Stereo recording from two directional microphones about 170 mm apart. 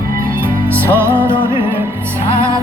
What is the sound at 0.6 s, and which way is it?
Music, 15° right (ahead or behind).